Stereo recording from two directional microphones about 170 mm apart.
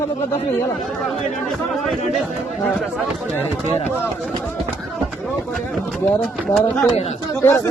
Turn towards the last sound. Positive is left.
turn(degrees=15)  # may be behind; listen again after turning